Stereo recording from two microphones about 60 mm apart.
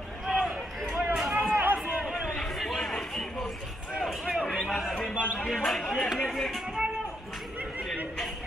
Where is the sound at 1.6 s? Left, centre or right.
Right.